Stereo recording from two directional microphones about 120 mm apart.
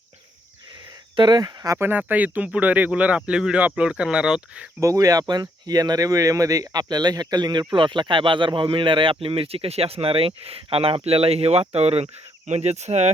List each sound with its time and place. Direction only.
1.1 s speech: 35° right (ahead or behind)
1.8 s speech: 15° right (ahead or behind)
4.8 s speech: 30° right (ahead or behind); by 13.1 s 70° right (ahead or behind)